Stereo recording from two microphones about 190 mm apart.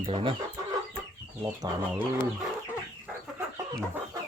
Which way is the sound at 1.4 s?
15° right (ahead or behind).